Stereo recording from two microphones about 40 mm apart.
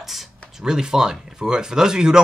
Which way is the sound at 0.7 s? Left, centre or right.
Centre.